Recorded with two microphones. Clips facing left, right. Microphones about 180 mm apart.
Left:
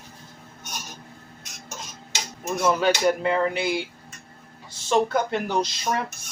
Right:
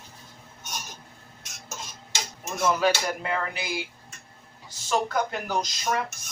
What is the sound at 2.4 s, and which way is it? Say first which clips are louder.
Speech: left 2 dB; 30° left (ahead or behind).